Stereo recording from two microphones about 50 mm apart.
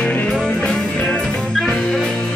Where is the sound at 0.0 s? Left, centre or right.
Left.